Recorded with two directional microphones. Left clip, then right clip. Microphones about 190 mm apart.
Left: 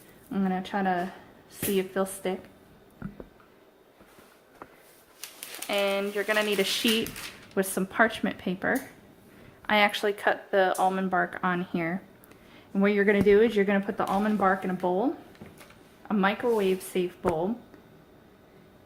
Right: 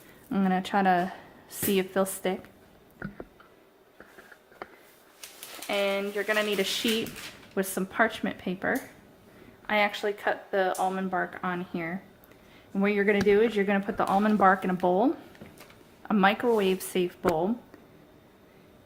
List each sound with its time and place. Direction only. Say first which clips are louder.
0.3 s speech: right 3 dB; 25° right (ahead or behind)
5.2 s a sound: left 2 dB; 25° left (ahead or behind)
5.6 s speech: left 1 dB; centre (ahead or behind)
9.6 s speech: left 3 dB; 15° left (ahead or behind)
13.9 s speech: right 2 dB; 15° right (ahead or behind)